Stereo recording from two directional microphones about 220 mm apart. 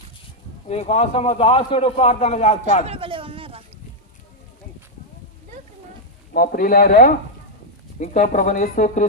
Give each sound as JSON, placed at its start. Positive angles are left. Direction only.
{"t": 0.7, "sound": "a man's voice", "side_deg": 30}
{"t": 2.8, "sound": "speech", "side_deg": -25}
{"t": 6.3, "sound": "speech", "side_deg": 40}